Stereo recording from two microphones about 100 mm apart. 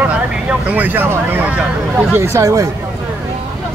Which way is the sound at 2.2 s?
25° right (ahead or behind).